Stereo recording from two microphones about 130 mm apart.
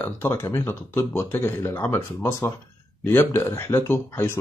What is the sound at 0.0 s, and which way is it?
Speech, 20° left (ahead or behind).